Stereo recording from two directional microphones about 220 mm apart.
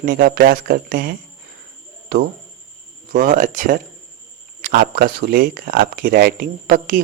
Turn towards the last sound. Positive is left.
turn(degrees=-40)  # may be behind; listen again after turning